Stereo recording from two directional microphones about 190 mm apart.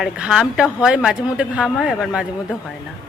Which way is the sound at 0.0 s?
5° right (ahead or behind).